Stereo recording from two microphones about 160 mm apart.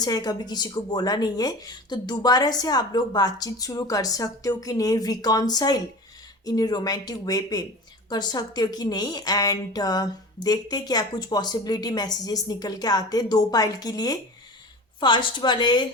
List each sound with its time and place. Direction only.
0.0 s a woman's voice: 25° left (ahead or behind)